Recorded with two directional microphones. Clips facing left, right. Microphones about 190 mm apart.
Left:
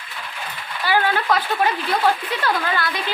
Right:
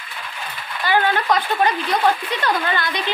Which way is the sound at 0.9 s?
5° left (ahead or behind).